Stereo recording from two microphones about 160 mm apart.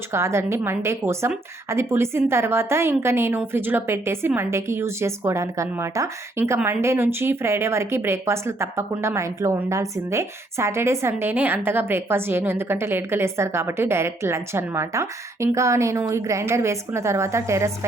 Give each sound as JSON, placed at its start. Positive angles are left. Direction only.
{"t": 0.1, "sound": "a woman's voice", "side_deg": -15}